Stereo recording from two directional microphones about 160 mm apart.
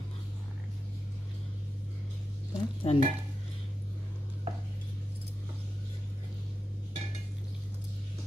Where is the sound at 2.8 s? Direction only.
35° left (ahead or behind).